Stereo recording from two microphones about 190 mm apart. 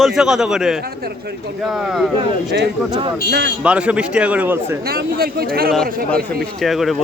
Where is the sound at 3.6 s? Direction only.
5° right (ahead or behind).